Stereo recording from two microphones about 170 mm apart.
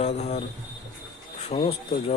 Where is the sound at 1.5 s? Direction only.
40° left (ahead or behind).